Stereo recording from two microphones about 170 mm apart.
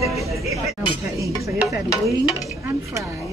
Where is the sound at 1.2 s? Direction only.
20° right (ahead or behind).